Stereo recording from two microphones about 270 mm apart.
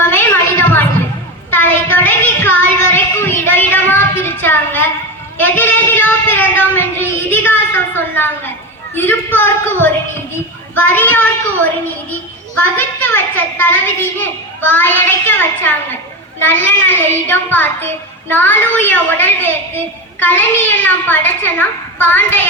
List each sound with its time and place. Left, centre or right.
0.0 s a sound: centre
5.4 s child singing: centre
9.0 s a child's voice: centre
12.7 s a child's voice: centre